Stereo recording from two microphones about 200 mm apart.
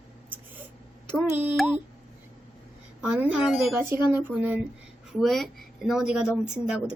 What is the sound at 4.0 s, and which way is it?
Speech, 20° left (ahead or behind).